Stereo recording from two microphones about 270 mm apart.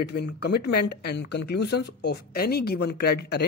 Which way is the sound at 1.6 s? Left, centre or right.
Left.